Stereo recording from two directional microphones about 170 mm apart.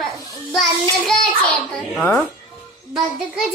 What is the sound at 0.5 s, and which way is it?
A child's voice, centre (ahead or behind).